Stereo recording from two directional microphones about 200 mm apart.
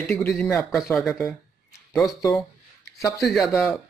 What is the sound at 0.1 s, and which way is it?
Speech, 5° left (ahead or behind).